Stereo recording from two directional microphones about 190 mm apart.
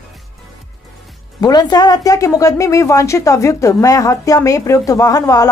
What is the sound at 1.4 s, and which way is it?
Speech, 20° left (ahead or behind).